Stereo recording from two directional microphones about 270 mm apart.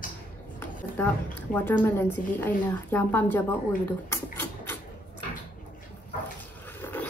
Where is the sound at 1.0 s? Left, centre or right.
Centre.